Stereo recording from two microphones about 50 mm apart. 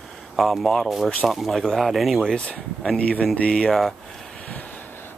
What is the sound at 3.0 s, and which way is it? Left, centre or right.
Speech, left.